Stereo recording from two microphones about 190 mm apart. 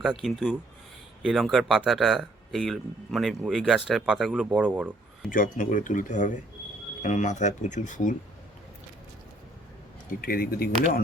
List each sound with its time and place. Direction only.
0.0 s speech: centre (ahead or behind)
5.3 s speech: 45° left (ahead or behind)
10.1 s speech: 50° left (ahead or behind)